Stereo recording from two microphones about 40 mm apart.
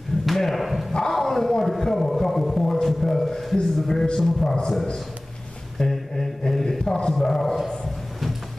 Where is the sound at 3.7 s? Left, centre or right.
Centre.